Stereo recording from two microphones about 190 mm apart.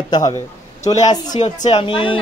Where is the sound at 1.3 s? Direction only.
40° left (ahead or behind).